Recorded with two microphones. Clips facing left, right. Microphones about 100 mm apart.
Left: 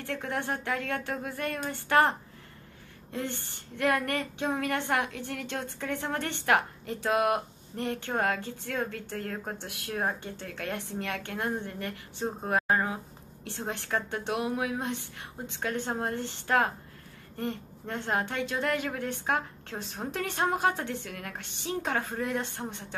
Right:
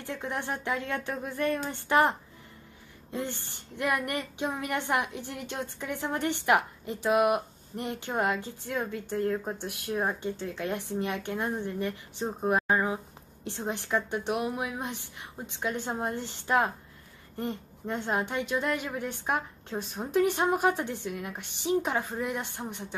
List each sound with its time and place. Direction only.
0.0 s a woman's voice: 20° right (ahead or behind)
12.4 s a woman's voice: 20° right (ahead or behind)